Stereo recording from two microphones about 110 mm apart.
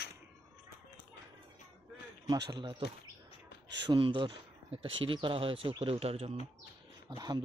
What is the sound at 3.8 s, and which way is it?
Speech, 45° right (ahead or behind).